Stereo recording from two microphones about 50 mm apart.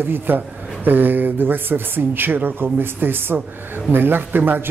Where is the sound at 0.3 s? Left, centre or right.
Right.